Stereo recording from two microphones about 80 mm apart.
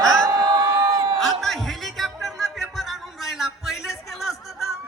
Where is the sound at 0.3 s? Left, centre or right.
Right.